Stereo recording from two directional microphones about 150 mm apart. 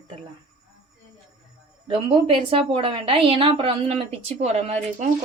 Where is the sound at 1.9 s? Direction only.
40° right (ahead or behind).